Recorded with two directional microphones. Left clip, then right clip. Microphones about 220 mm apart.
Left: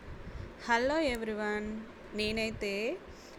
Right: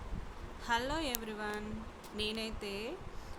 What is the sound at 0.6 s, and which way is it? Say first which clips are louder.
A woman's voice: left 6 dB; 20° left (ahead or behind).